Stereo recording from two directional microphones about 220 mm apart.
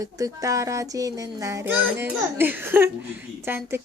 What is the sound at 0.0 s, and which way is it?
Speech, 15° right (ahead or behind).